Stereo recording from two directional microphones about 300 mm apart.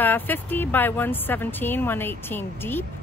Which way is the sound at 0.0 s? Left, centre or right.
Centre.